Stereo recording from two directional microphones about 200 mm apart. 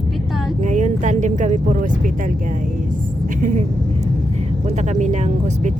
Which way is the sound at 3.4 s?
40° right (ahead or behind).